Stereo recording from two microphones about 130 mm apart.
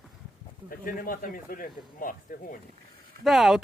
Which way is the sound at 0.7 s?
90° left.